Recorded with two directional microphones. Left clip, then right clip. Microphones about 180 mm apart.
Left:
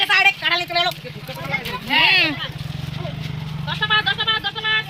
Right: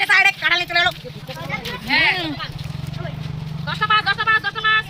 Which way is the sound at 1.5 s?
20° right (ahead or behind).